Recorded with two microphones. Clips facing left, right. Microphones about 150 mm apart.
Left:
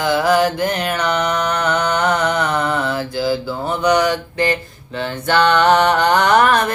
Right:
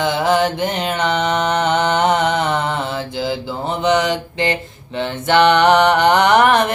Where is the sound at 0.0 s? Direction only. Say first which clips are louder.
Left 1 dB; 25° right (ahead or behind).